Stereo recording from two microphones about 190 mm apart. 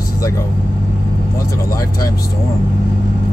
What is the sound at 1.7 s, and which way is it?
Speech, 15° left (ahead or behind).